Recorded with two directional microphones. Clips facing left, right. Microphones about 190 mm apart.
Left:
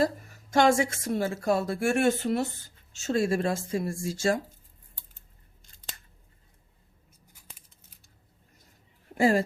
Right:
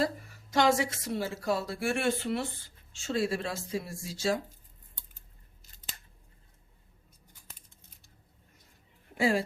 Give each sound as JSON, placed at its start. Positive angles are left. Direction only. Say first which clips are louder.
{"t": 0.0, "sound": "a woman's voice", "louder": "left 4 dB", "side_deg": 45}
{"t": 7.5, "sound": "scissors", "louder": "even", "side_deg": 5}
{"t": 9.1, "sound": "speech", "louder": "left 4 dB", "side_deg": 45}